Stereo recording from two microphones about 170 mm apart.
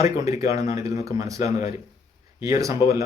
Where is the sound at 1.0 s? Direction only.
20° right (ahead or behind).